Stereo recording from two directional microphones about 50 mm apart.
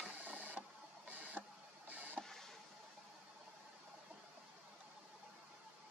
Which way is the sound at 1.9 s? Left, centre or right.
Right.